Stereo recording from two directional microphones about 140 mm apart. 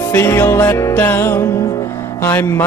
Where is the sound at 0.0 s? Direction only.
20° left (ahead or behind).